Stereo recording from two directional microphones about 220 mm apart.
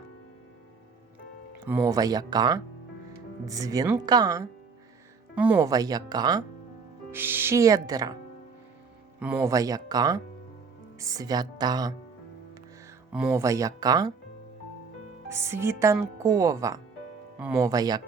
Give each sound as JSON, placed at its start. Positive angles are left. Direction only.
{"t": 1.6, "sound": "speech", "side_deg": -10}
{"t": 5.3, "sound": "speech", "side_deg": -5}
{"t": 5.5, "sound": "speech", "side_deg": -15}
{"t": 9.1, "sound": "speech", "side_deg": -5}
{"t": 13.1, "sound": "speech", "side_deg": -10}
{"t": 15.3, "sound": "speech", "side_deg": -10}
{"t": 17.7, "sound": "speech", "side_deg": -20}